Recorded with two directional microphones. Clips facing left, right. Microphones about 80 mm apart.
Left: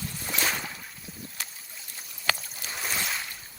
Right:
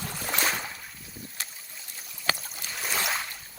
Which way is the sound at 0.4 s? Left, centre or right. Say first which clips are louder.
Right 1 dB; centre.